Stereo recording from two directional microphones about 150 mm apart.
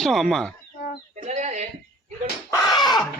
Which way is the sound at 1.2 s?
55° right (ahead or behind).